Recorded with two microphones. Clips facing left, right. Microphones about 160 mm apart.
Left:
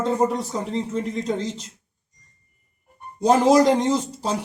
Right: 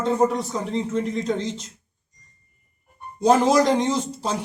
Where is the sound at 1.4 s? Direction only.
35° left (ahead or behind).